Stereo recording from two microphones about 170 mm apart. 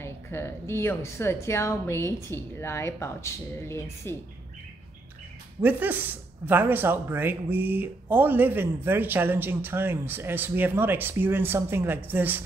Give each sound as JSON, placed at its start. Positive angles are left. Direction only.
{"t": 0.0, "sound": "a woman's voice", "side_deg": 15}
{"t": 5.6, "sound": "speech", "side_deg": -10}